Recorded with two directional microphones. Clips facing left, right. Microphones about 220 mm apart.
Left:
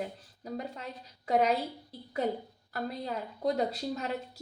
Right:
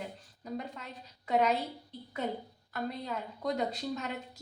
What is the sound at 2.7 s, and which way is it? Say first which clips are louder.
A woman's voice: left 1 dB; 35° left (ahead or behind).